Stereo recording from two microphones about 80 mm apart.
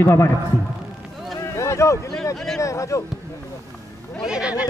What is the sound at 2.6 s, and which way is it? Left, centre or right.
Speech, left.